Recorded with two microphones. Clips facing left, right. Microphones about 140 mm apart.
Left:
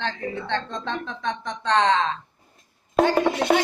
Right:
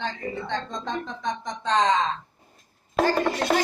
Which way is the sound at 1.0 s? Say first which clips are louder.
Left 1 dB; 65° left (ahead or behind).